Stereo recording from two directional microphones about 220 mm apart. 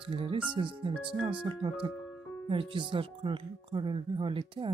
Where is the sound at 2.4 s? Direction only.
25° right (ahead or behind).